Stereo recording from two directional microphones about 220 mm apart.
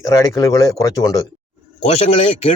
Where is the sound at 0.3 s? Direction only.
15° left (ahead or behind).